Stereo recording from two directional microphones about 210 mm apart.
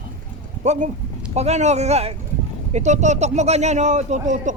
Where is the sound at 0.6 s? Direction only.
35° right (ahead or behind).